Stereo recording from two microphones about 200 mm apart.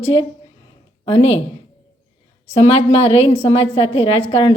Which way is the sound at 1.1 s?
30° left (ahead or behind).